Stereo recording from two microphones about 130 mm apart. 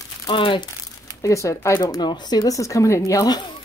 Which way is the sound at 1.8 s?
35° left (ahead or behind).